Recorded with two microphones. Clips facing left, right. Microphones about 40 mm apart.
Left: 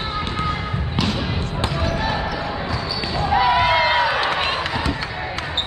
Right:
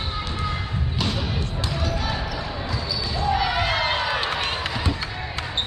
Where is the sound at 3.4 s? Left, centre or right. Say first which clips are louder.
Left 7 dB; centre.